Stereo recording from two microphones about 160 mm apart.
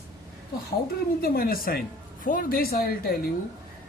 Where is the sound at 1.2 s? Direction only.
65° left (ahead or behind).